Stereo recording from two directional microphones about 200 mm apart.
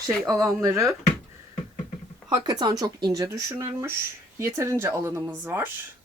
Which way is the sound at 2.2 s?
20° right (ahead or behind).